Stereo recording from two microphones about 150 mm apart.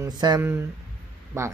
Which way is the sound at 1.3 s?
20° right (ahead or behind).